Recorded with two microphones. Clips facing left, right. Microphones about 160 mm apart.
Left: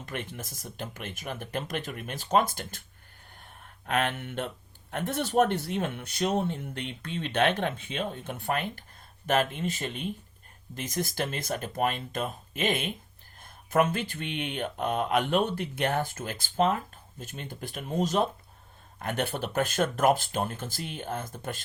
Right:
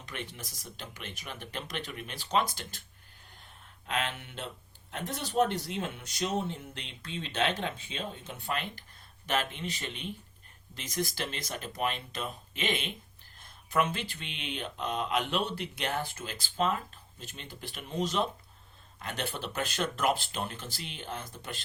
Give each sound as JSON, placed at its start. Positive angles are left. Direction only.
{"t": 0.0, "sound": "speech", "side_deg": 50}
{"t": 3.3, "sound": "a sound", "side_deg": 55}
{"t": 4.9, "sound": "speech", "side_deg": 55}